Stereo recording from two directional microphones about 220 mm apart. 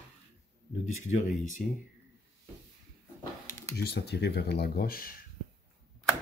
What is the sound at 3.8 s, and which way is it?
Speech, 50° left (ahead or behind).